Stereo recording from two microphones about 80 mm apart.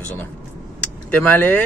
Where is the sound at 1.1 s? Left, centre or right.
Left.